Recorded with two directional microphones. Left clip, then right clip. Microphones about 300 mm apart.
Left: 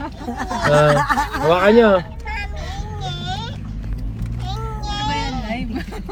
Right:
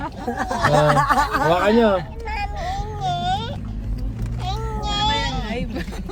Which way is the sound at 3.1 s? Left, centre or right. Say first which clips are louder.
Right 6 dB; right.